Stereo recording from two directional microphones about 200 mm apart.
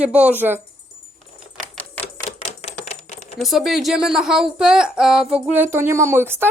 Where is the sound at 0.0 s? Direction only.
5° right (ahead or behind).